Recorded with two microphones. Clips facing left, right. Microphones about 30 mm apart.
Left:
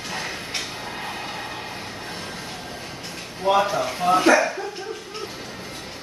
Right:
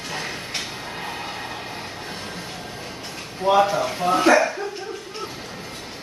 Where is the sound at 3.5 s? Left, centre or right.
Centre.